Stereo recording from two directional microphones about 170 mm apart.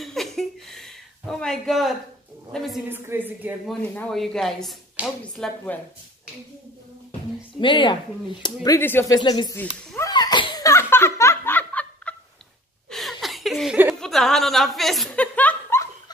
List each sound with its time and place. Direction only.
0.0 s a sound: centre (ahead or behind)
2.5 s speech: centre (ahead or behind)
2.9 s a woman's voice: 10° right (ahead or behind)
3.6 s a woman's voice: centre (ahead or behind)
7.6 s speech: 30° left (ahead or behind)
8.6 s speech: 15° left (ahead or behind)
9.6 s a sound: 10° left (ahead or behind)
10.0 s laughter: 25° left (ahead or behind); by 12.2 s 10° left (ahead or behind)
12.9 s chuckle: centre (ahead or behind)